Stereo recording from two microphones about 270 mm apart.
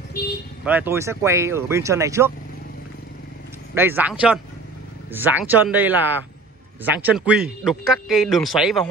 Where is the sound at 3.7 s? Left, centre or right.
Centre.